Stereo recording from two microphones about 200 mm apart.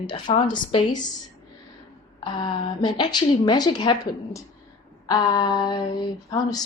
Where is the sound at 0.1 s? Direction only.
25° left (ahead or behind).